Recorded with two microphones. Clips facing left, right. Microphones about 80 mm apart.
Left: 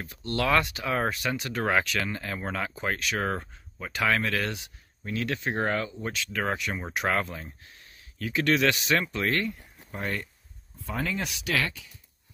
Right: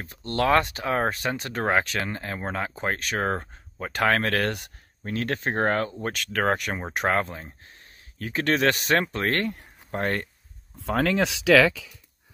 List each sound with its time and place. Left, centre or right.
0.0 s speech: right
6.8 s speech: right
10.8 s speech: right